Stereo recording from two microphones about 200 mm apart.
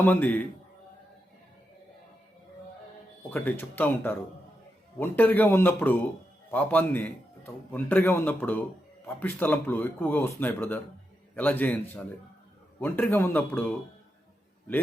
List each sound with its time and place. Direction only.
0.0 s a man's voice: 10° left (ahead or behind)
3.2 s a man's voice: 10° left (ahead or behind)
12.8 s a man's voice: 10° left (ahead or behind)